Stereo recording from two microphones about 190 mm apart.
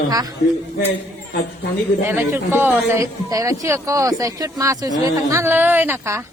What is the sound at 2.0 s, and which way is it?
A man's voice, 15° right (ahead or behind).